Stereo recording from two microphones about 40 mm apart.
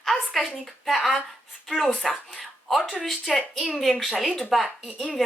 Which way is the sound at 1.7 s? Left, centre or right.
Centre.